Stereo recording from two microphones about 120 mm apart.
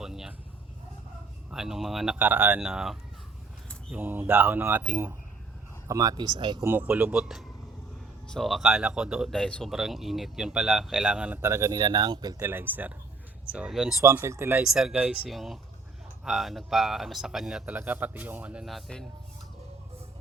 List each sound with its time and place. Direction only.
0.0 s a sound: 5° right (ahead or behind)
1.5 s speech: 5° right (ahead or behind)
2.1 s a man's voice: 15° right (ahead or behind)
3.9 s a man's voice: 15° right (ahead or behind)
5.9 s speech: 30° right (ahead or behind)
6.6 s a man's voice: 15° right (ahead or behind)
9.3 s a man's voice: 5° left (ahead or behind); by 12.5 s 35° right (ahead or behind)
12.5 s a man's voice: 15° right (ahead or behind)
14.0 s speech: 20° right (ahead or behind)
14.6 s a man's voice: 5° right (ahead or behind)
15.3 s speech: centre (ahead or behind)
17.7 s a man's voice: 15° right (ahead or behind); by 19.0 s centre (ahead or behind)